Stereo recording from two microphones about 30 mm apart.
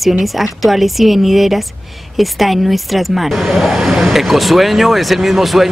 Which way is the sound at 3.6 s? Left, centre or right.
Centre.